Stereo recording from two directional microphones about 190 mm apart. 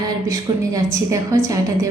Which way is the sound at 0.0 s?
20° right (ahead or behind).